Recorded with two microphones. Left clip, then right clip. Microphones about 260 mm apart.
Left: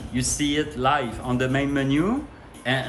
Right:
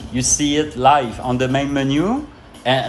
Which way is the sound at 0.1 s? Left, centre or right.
Centre.